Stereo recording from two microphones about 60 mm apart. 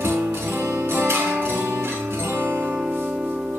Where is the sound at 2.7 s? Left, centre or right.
Right.